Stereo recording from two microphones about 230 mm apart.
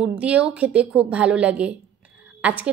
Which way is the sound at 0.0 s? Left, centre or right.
Centre.